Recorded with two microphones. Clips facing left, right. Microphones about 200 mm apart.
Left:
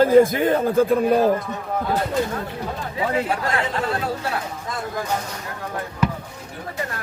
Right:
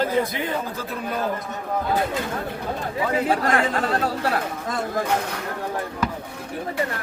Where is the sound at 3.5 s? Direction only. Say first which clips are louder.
Right 2 dB; 50° right (ahead or behind).